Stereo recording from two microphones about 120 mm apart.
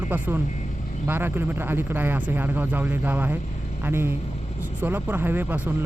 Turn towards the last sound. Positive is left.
turn(degrees=-15)  # may be behind; listen again after turning